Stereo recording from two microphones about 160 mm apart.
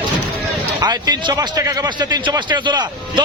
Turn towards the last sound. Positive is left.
turn(degrees=-30)  # may be behind; listen again after turning